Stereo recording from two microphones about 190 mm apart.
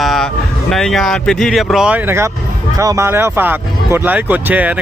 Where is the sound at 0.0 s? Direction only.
Centre (ahead or behind).